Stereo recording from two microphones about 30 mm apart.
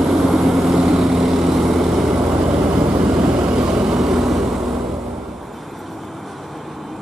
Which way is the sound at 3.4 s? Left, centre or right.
Right.